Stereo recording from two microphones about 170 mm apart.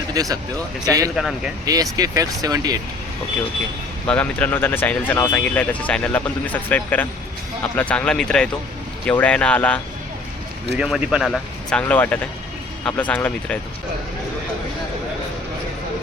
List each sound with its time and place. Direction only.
0.1 s speech: 20° right (ahead or behind)
4.0 s speech: 10° left (ahead or behind)
10.8 s speech: 5° right (ahead or behind)